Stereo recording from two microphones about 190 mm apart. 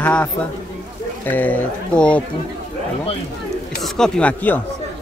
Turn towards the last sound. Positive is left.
turn(degrees=5)  # may be behind; listen again after turning